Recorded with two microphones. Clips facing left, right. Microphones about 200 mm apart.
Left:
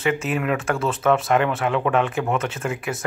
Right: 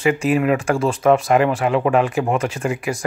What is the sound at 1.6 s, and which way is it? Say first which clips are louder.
Speech: right 4 dB; 5° right (ahead or behind).